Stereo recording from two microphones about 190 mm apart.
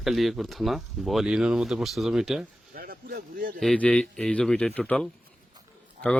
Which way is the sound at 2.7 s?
50° right (ahead or behind).